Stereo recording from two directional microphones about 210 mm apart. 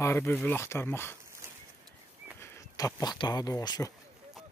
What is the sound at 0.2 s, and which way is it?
Speech, 5° left (ahead or behind).